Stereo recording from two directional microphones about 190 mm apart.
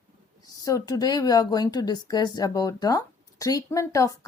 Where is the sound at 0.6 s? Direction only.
20° left (ahead or behind).